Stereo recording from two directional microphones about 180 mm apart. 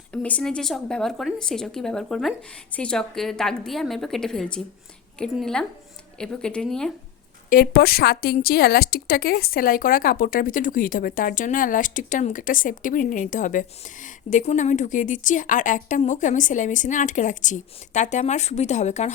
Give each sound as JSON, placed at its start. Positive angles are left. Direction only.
{"t": 0.1, "sound": "speech", "side_deg": 5}
{"t": 7.5, "sound": "a woman's voice", "side_deg": 60}